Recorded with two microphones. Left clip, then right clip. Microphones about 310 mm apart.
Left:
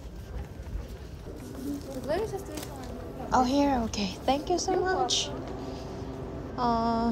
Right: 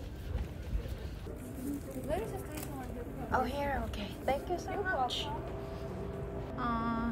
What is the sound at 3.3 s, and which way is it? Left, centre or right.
A woman's voice, centre.